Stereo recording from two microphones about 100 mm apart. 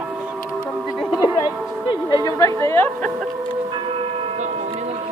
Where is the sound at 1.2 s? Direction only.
50° left (ahead or behind); by 2.9 s 25° left (ahead or behind).